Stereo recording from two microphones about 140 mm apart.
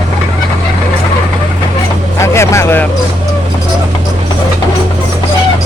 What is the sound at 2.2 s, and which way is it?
Vehicle, 20° left (ahead or behind).